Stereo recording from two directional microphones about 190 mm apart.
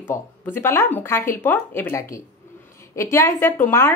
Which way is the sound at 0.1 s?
10° left (ahead or behind).